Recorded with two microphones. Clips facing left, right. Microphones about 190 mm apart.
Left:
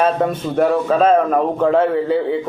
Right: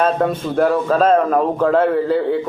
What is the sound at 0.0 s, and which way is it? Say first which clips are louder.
A man's voice: even; 5° left (ahead or behind).